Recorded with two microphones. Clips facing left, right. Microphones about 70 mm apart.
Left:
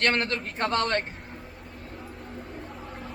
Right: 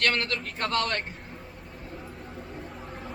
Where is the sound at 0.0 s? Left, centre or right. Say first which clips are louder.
Left 2 dB; left.